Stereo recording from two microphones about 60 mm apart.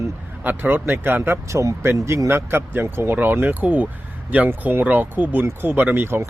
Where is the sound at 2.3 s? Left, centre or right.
Right.